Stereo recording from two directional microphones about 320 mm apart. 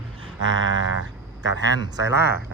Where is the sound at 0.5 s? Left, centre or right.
Right.